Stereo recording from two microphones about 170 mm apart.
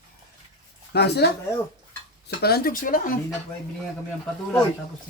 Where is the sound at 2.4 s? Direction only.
70° left (ahead or behind).